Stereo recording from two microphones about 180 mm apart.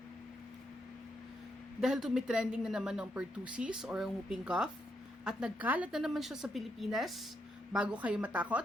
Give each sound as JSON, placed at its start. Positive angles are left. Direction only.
{"t": 1.8, "sound": "a woman's voice", "side_deg": 0}